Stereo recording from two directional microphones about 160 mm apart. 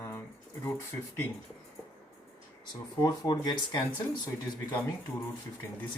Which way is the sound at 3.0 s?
25° left (ahead or behind).